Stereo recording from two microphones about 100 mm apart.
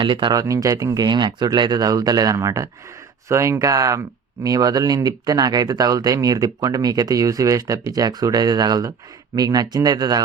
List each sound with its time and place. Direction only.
0.0 s speech: 55° right (ahead or behind)
0.3 s speech: 35° right (ahead or behind)